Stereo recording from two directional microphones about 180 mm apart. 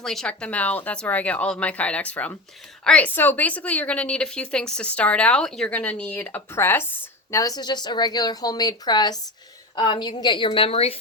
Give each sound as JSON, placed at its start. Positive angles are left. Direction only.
{"t": 0.0, "sound": "a woman's voice", "side_deg": 0}